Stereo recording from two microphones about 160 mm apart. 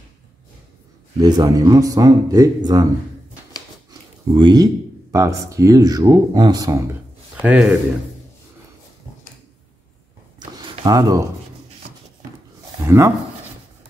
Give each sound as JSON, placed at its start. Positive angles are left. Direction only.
{"t": 1.2, "sound": "speech", "side_deg": -20}
{"t": 3.9, "sound": "a sound", "side_deg": -25}
{"t": 5.1, "sound": "speech", "side_deg": -20}
{"t": 7.4, "sound": "a man's voice", "side_deg": -10}
{"t": 10.6, "sound": "a sound", "side_deg": -30}
{"t": 12.8, "sound": "speech", "side_deg": -20}